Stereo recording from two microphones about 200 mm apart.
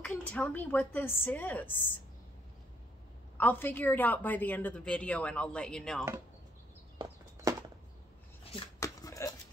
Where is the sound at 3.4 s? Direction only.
10° left (ahead or behind).